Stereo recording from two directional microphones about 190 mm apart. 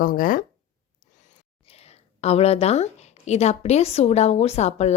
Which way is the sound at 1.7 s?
35° left (ahead or behind).